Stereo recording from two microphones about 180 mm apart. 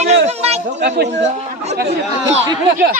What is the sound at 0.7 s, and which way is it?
Speech, 70° right (ahead or behind).